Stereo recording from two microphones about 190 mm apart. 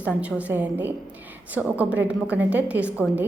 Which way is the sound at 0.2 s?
5° right (ahead or behind).